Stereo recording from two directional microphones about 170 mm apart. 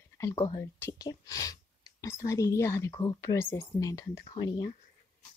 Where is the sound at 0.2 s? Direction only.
20° left (ahead or behind).